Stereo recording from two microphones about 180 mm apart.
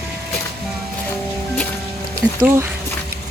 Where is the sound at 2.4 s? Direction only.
10° right (ahead or behind).